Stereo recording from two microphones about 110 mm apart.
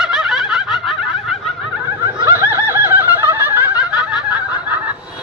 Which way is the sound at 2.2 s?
20° right (ahead or behind).